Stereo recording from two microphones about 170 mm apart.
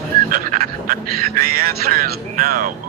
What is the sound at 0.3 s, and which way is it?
Speech, 55° right (ahead or behind).